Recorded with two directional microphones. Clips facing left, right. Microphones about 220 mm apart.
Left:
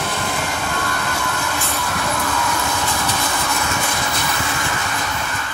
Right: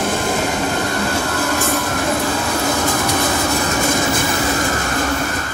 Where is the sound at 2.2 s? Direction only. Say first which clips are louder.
Right 4 dB; 35° right (ahead or behind).